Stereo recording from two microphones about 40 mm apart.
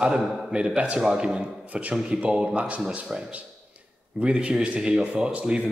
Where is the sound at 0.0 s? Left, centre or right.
Right.